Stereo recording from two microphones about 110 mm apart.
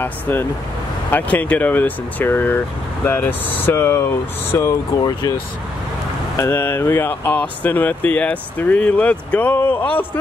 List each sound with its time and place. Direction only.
0.0 s speech: 20° left (ahead or behind)
6.3 s speech: 25° left (ahead or behind)